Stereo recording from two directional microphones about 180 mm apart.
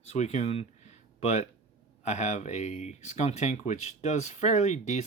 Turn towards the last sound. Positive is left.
turn(degrees=40)  # may be behind; listen again after turning